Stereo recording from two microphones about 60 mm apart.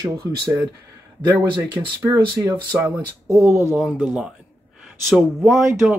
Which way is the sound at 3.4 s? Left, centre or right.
Right.